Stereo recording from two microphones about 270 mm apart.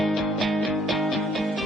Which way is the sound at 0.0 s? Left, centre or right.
Centre.